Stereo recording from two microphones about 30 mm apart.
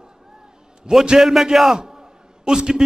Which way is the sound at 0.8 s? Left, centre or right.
Right.